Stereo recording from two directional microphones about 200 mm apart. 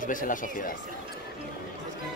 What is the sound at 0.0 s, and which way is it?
Speech, 40° left (ahead or behind).